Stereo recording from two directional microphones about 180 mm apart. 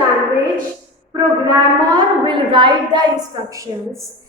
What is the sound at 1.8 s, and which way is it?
A woman's voice, 25° right (ahead or behind).